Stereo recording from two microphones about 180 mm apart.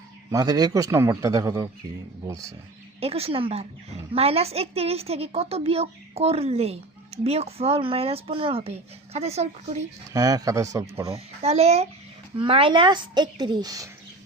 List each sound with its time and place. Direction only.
0.3 s a woman's voice: 20° right (ahead or behind)
3.0 s a woman's voice: 35° right (ahead or behind)
10.1 s speech: 20° right (ahead or behind)
11.0 s a woman's voice: 35° right (ahead or behind)